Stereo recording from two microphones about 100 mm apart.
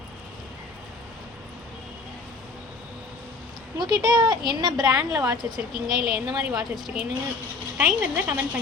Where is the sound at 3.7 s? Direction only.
45° right (ahead or behind).